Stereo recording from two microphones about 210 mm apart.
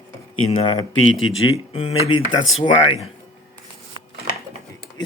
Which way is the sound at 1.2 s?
70° left (ahead or behind).